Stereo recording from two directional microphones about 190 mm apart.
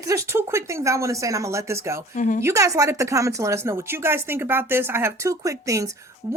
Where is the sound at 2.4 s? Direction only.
15° right (ahead or behind).